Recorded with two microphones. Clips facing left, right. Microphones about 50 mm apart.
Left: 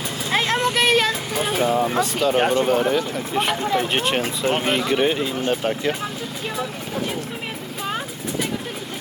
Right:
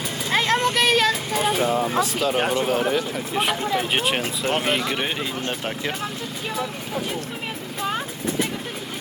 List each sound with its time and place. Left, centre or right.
0.3 s vehicle: centre
1.4 s speech: centre
7.8 s vehicle: centre